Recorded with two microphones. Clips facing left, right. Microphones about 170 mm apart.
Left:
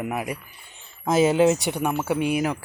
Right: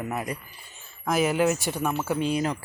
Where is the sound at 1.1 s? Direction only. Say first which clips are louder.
Left 5 dB; 25° left (ahead or behind).